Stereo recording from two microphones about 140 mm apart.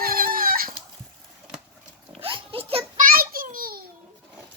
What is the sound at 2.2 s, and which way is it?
Oink, 40° right (ahead or behind).